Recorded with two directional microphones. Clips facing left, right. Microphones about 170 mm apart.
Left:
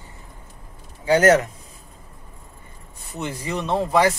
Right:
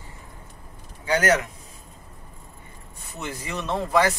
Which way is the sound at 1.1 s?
40° left (ahead or behind).